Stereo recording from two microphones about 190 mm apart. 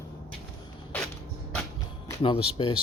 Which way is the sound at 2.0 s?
25° left (ahead or behind).